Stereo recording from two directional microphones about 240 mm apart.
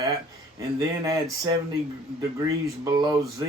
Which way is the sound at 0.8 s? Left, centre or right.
Centre.